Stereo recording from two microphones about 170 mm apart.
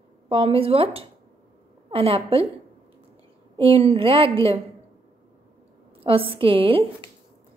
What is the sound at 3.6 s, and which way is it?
Speech, 35° right (ahead or behind).